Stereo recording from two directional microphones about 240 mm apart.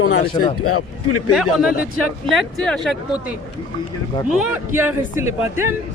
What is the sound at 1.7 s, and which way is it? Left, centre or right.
Speech, left.